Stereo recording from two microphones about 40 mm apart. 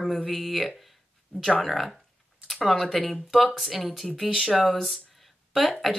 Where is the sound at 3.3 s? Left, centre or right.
Centre.